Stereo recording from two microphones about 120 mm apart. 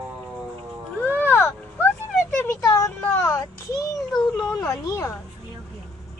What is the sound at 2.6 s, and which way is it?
Child singing, 30° left (ahead or behind).